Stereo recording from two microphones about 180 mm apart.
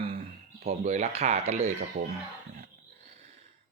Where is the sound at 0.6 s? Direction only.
35° right (ahead or behind).